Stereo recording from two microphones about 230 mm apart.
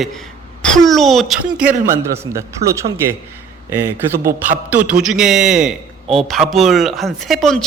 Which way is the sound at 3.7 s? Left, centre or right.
Centre.